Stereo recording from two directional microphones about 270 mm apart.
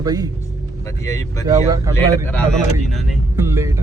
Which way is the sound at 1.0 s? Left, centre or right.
Centre.